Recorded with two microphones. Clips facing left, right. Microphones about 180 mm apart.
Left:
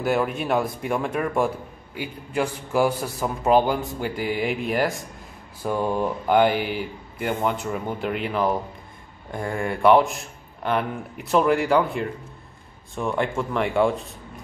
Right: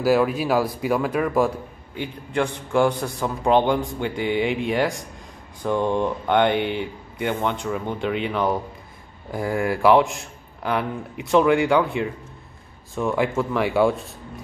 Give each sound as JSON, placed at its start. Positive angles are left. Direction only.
{"t": 0.0, "sound": "a man's voice", "side_deg": 0}